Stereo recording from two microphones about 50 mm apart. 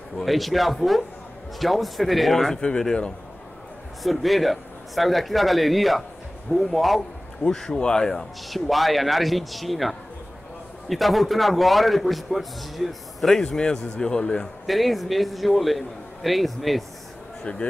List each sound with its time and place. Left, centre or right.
0.2 s a man's voice: centre
4.0 s a man's voice: centre
7.4 s a man's voice: centre
13.4 s a man's voice: centre
14.7 s a man's voice: centre
17.4 s speech: left